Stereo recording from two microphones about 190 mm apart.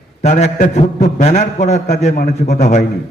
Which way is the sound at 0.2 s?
35° left (ahead or behind).